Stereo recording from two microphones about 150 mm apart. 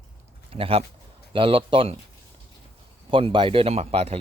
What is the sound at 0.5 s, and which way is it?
Speech, 40° right (ahead or behind).